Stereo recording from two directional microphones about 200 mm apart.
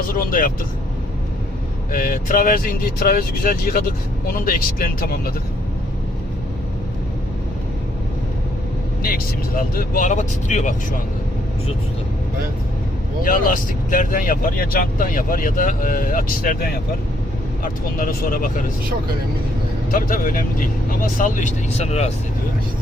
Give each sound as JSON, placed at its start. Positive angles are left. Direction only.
{"t": 0.2, "sound": "speech", "side_deg": 45}
{"t": 1.9, "sound": "speech", "side_deg": 45}
{"t": 9.6, "sound": "speech", "side_deg": 45}
{"t": 13.2, "sound": "speech", "side_deg": 45}
{"t": 19.9, "sound": "speech", "side_deg": 45}